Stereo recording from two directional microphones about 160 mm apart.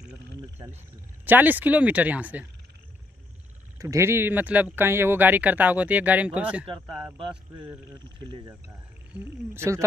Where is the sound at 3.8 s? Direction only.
20° right (ahead or behind).